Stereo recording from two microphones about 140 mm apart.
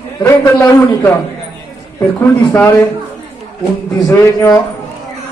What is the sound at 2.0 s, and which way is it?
Speech, 15° left (ahead or behind).